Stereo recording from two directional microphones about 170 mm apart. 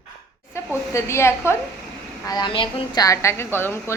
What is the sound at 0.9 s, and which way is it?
Speech, 15° left (ahead or behind).